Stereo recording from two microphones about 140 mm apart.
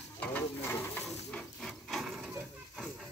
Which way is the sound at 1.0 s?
5° left (ahead or behind).